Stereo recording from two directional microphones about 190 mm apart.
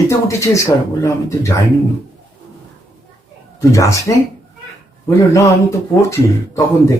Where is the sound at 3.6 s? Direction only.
15° left (ahead or behind).